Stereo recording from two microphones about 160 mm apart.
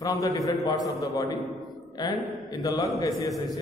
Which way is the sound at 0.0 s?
20° left (ahead or behind).